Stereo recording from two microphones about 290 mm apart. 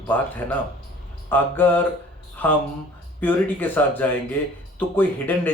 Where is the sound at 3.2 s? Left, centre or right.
Centre.